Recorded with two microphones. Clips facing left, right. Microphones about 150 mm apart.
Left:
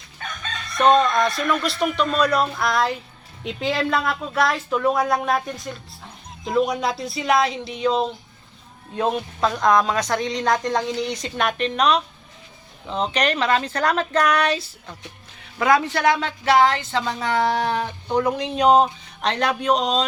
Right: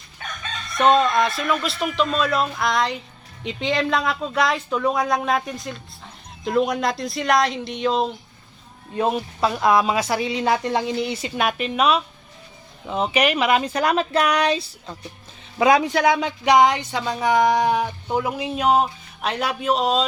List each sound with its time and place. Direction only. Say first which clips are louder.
0.7 s a woman's voice: even; centre (ahead or behind)